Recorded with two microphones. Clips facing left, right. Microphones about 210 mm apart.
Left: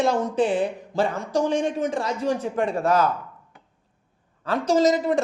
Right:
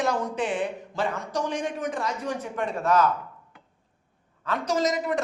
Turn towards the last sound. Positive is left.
turn(degrees=30)  # may be behind; listen again after turning